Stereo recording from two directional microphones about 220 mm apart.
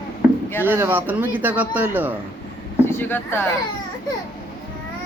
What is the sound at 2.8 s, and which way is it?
Speech, 10° left (ahead or behind).